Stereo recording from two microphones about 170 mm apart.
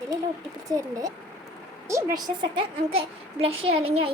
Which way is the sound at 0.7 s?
20° right (ahead or behind).